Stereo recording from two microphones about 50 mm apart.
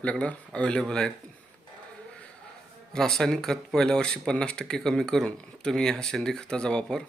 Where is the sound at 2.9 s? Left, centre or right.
Centre.